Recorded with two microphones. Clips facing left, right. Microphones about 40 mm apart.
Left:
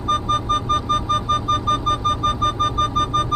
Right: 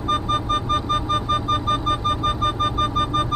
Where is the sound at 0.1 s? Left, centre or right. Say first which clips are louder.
Left 2 dB; centre.